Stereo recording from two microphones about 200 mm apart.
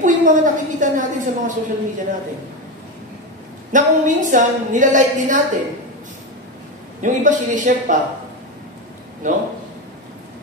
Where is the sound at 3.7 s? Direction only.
40° right (ahead or behind).